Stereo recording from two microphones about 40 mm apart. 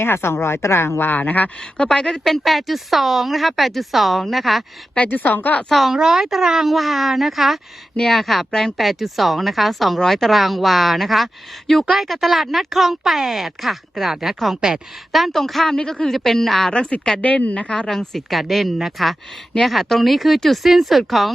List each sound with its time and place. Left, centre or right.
0.0 s speech: left
1.1 s a woman's voice: left
1.9 s speech: centre
5.0 s a woman's voice: left
5.9 s a woman's voice: centre
8.8 s a woman's voice: centre
15.7 s a woman's voice: centre
16.7 s a woman's voice: left
17.2 s speech: left
17.7 s a woman's voice: centre
17.9 s speech: centre